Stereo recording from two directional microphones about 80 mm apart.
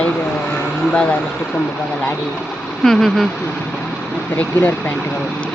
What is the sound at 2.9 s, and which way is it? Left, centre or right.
Speech, centre.